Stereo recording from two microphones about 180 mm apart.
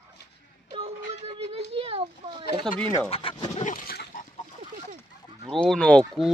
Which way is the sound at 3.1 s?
30° left (ahead or behind).